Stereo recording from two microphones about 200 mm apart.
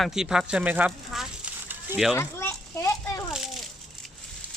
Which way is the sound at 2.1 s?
10° left (ahead or behind).